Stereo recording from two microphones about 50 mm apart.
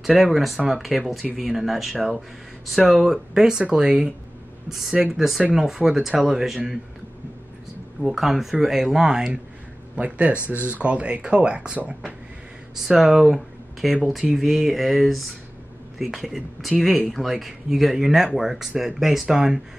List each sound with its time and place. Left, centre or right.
0.0 s speech: centre
4.6 s speech: centre
8.0 s speech: centre
9.9 s speech: right
12.8 s speech: centre